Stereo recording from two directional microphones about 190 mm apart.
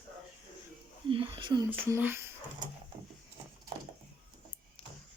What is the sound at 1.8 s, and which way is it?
Speech, 10° right (ahead or behind).